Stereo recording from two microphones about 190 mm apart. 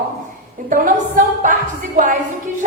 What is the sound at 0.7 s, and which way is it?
Speech, 45° right (ahead or behind).